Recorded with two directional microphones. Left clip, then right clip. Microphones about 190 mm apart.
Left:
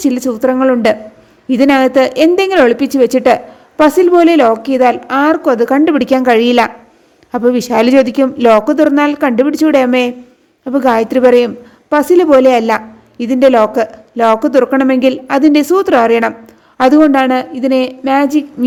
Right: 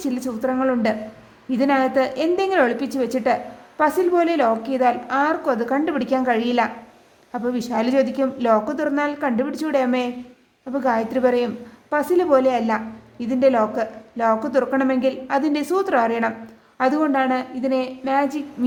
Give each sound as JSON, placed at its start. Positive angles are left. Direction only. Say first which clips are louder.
{"t": 0.0, "sound": "a woman's voice", "louder": "left 11 dB", "side_deg": 40}